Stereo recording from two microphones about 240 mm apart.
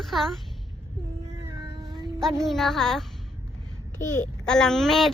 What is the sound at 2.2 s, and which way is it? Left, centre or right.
Speech, centre.